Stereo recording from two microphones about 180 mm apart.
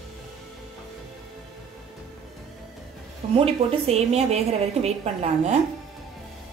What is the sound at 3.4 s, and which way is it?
A woman's voice, 35° right (ahead or behind).